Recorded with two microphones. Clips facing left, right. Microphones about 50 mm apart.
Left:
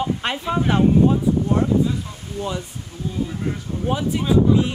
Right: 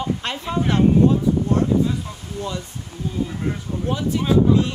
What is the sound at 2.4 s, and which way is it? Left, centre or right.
Speech, left.